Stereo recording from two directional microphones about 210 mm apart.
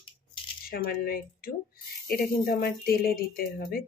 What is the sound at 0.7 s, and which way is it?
Speech, 45° left (ahead or behind).